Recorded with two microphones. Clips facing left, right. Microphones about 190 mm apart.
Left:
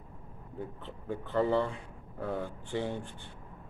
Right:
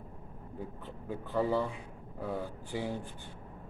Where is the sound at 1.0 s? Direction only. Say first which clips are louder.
Left 2 dB; 5° right (ahead or behind).